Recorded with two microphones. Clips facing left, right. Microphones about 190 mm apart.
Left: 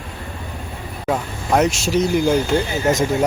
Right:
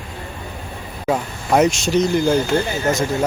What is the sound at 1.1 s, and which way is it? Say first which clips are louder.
Speech: right 1 dB; centre (ahead or behind).